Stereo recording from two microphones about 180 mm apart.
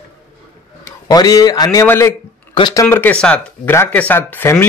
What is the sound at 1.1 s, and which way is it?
A man's voice, 20° left (ahead or behind).